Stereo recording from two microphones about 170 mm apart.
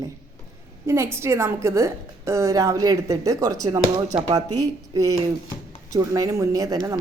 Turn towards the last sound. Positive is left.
turn(degrees=-20)  # may be behind; listen again after turning